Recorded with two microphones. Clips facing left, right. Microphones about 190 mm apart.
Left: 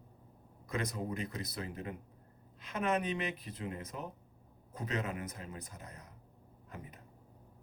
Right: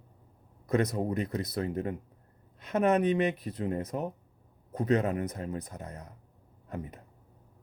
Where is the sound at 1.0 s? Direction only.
40° right (ahead or behind).